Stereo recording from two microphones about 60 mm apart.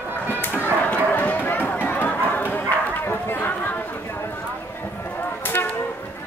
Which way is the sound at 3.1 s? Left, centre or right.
Left.